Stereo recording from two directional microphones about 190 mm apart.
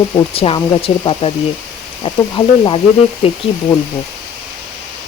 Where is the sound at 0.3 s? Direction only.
30° left (ahead or behind).